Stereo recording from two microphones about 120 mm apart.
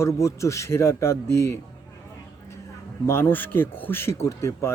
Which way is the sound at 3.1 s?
20° left (ahead or behind).